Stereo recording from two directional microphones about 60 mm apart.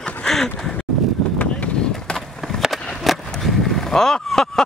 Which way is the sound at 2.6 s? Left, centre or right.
Centre.